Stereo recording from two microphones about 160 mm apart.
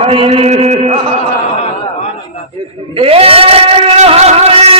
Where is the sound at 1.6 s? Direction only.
45° left (ahead or behind).